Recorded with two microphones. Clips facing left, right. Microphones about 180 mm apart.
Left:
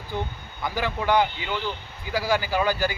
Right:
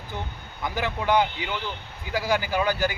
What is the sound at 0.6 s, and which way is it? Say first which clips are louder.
A man's voice: left 1 dB; 15° right (ahead or behind).